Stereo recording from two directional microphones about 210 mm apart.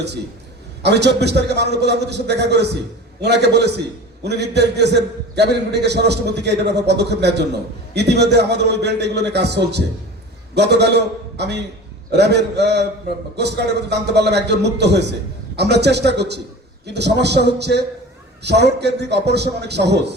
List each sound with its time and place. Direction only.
0.8 s a man's voice: 55° right (ahead or behind)
13.9 s a man's voice: 55° right (ahead or behind)